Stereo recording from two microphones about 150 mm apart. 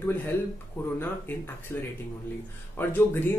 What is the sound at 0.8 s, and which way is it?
Speech, 15° left (ahead or behind).